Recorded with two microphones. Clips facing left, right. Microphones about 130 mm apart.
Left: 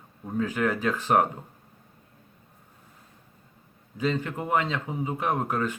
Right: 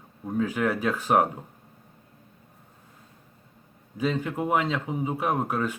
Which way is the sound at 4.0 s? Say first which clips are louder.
Right 1 dB; 10° right (ahead or behind).